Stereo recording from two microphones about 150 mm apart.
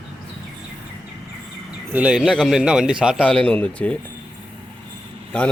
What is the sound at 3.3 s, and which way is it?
Speech, 5° left (ahead or behind).